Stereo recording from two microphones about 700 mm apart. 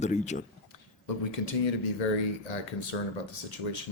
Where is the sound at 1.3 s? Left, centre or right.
Left.